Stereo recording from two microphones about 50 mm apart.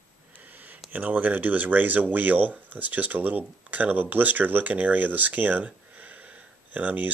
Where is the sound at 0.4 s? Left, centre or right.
Right.